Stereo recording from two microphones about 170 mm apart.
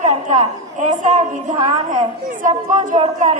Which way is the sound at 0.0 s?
45° right (ahead or behind).